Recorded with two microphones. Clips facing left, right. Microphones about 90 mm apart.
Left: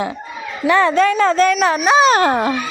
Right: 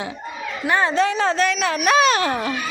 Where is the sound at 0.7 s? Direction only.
75° left (ahead or behind).